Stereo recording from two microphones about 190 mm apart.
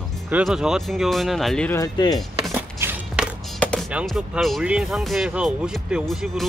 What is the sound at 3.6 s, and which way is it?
Music, 5° left (ahead or behind).